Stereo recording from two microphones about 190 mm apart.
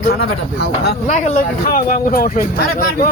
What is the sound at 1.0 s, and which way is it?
Speech, 35° left (ahead or behind).